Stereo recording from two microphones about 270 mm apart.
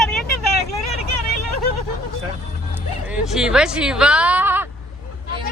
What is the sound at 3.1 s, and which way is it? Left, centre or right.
Speech, centre.